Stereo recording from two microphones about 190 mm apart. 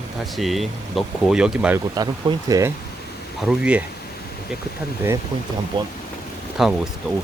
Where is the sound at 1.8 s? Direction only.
20° right (ahead or behind).